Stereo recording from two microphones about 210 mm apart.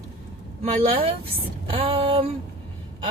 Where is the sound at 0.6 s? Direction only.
30° right (ahead or behind).